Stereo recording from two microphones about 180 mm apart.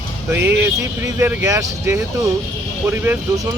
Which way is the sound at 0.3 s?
15° right (ahead or behind).